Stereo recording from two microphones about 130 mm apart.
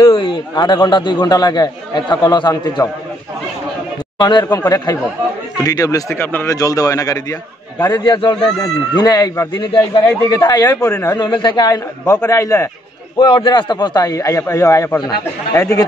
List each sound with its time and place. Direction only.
0.0 s a man's voice: 40° left (ahead or behind)
4.2 s a man's voice: 35° left (ahead or behind)
11.1 s a man's voice: 35° left (ahead or behind)
13.2 s a man's voice: 40° left (ahead or behind); by 15.8 s 20° left (ahead or behind)